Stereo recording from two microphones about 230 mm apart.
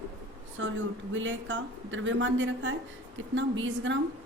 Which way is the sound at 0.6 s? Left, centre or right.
Right.